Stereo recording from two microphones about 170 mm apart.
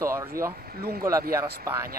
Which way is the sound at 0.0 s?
15° right (ahead or behind).